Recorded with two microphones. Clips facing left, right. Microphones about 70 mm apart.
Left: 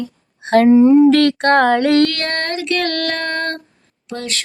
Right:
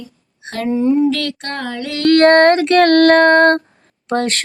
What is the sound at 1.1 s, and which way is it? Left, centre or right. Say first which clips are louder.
Music: left 9 dB; left.